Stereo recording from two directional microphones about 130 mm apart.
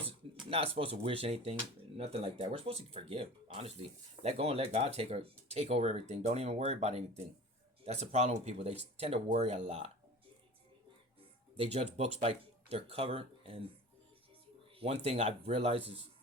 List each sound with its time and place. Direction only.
0.5 s speech: 45° right (ahead or behind)
9.3 s speech: 65° right (ahead or behind)
11.5 s speech: 50° right (ahead or behind)
14.8 s speech: 55° right (ahead or behind)